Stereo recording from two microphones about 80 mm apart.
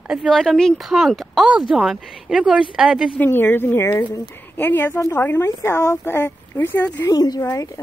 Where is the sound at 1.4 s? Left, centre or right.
Centre.